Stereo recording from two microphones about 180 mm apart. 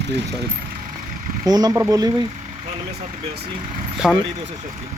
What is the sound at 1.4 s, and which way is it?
Speech, 20° right (ahead or behind).